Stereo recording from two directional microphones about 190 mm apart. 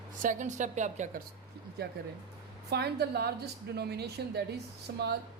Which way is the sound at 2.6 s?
55° right (ahead or behind).